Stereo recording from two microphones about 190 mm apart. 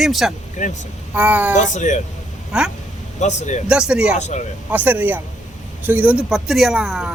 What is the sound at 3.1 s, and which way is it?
Speech, 40° left (ahead or behind).